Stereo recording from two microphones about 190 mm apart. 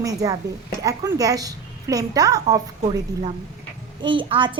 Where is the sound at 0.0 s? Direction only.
20° right (ahead or behind).